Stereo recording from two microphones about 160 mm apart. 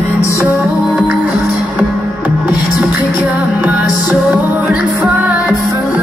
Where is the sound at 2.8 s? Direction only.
10° right (ahead or behind).